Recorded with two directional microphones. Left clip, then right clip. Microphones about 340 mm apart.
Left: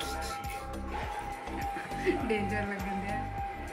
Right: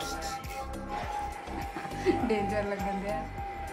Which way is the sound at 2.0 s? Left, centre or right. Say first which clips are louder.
Right 3 dB; centre.